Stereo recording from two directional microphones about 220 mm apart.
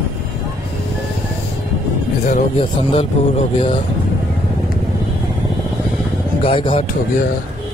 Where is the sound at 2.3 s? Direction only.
25° left (ahead or behind).